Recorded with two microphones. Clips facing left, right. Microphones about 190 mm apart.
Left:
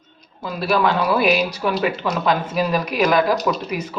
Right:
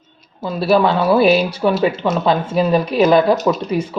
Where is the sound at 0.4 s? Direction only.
25° right (ahead or behind).